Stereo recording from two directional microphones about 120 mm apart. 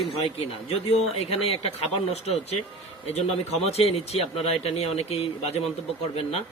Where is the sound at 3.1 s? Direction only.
60° left (ahead or behind).